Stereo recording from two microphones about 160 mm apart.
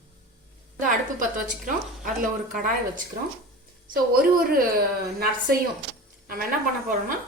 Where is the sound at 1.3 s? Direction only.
60° right (ahead or behind).